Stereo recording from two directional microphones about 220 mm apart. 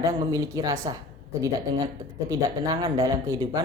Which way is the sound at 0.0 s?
15° right (ahead or behind).